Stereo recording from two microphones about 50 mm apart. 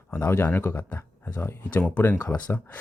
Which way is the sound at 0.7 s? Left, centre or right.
Left.